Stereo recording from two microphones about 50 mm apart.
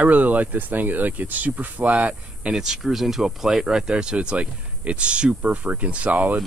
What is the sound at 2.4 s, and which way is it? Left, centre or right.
Speech, centre.